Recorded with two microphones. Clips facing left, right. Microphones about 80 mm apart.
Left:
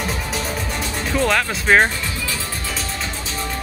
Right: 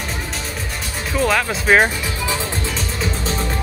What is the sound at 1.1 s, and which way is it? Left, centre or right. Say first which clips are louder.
Speech: right 1 dB; centre.